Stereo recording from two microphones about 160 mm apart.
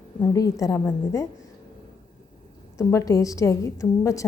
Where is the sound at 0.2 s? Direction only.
20° left (ahead or behind).